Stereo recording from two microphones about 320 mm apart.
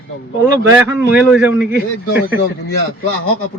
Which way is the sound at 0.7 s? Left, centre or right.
Centre.